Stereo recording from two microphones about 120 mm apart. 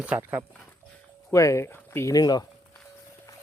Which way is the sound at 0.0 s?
15° right (ahead or behind).